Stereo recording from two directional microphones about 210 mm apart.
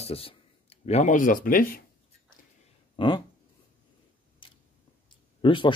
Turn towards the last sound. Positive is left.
turn(degrees=25)  # may be behind; listen again after turning